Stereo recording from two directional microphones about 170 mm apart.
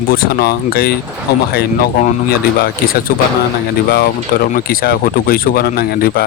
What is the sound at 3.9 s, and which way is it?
Speech, 60° left (ahead or behind).